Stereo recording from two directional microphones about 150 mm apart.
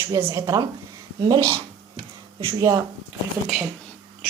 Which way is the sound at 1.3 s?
35° right (ahead or behind).